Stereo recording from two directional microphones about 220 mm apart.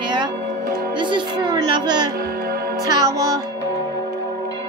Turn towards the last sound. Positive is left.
turn(degrees=-15)  # may be behind; listen again after turning